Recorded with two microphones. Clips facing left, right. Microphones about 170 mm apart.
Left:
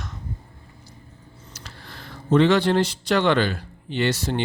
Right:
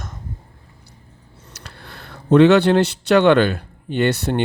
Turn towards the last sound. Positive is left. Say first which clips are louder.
# right 5 dB
turn(degrees=-60)  # may be behind; listen again after turning